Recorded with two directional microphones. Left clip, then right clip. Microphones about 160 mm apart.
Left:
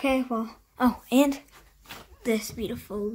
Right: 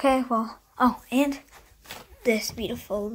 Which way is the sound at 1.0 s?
40° left (ahead or behind).